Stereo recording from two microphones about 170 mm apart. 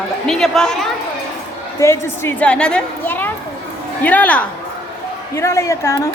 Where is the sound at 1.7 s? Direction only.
15° left (ahead or behind).